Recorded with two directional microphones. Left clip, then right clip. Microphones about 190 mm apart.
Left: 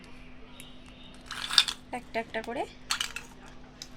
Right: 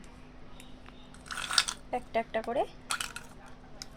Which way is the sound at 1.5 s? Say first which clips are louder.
Left 4 dB; 20° right (ahead or behind).